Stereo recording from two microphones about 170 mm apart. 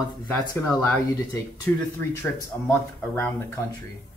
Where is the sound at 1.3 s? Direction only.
20° left (ahead or behind).